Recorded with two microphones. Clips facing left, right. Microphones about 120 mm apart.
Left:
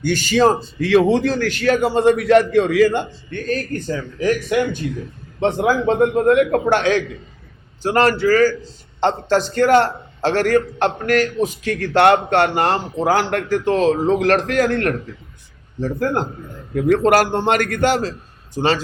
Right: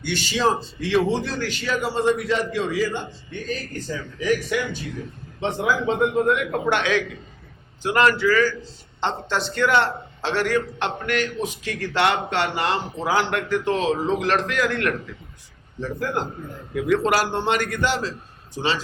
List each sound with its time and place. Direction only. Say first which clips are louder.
0.0 s a man's voice: left 7 dB; 45° left (ahead or behind)